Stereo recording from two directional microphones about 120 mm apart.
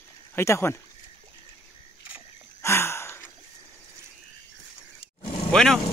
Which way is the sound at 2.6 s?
20° left (ahead or behind).